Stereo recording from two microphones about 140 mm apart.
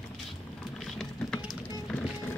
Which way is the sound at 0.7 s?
Centre (ahead or behind).